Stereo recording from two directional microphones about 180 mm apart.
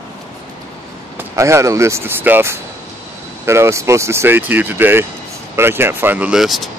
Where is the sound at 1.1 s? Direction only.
15° right (ahead or behind).